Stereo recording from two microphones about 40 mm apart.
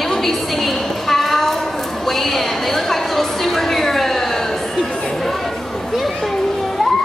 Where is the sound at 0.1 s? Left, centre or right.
Centre.